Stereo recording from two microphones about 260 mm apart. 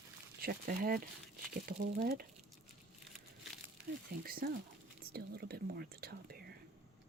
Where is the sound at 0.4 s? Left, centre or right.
Right.